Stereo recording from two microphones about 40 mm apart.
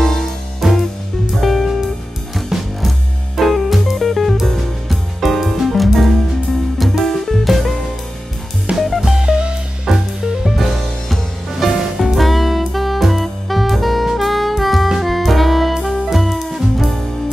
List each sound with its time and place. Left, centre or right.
0.0 s music: centre
1.3 s music: centre
8.7 s music: centre
9.2 s music: right
9.8 s music: centre
12.1 s saxophone: centre
15.0 s music: centre